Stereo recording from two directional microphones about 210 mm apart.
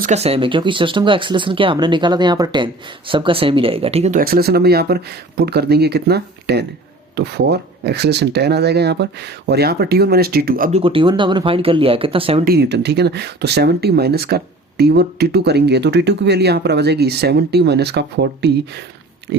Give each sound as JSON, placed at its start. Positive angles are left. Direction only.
{"t": 0.0, "sound": "speech", "side_deg": -30}
{"t": 4.2, "sound": "speech", "side_deg": -45}
{"t": 10.8, "sound": "speech", "side_deg": -25}
{"t": 12.5, "sound": "speech", "side_deg": -55}